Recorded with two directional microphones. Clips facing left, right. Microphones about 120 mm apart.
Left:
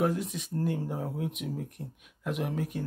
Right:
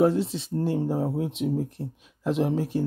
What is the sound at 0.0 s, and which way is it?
Speech, 30° right (ahead or behind).